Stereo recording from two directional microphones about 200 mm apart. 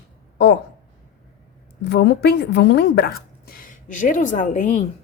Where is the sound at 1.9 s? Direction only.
55° left (ahead or behind).